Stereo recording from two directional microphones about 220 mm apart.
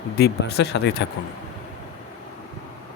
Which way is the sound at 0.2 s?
50° left (ahead or behind).